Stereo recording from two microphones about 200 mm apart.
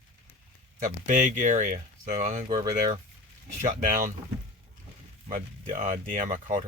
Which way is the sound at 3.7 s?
45° right (ahead or behind).